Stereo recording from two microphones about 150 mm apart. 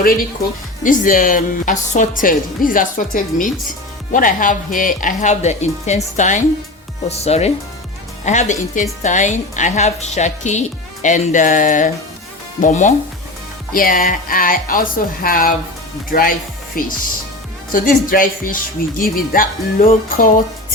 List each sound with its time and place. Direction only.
0.9 s a woman's voice: 65° left (ahead or behind)
13.7 s speech: 70° left (ahead or behind)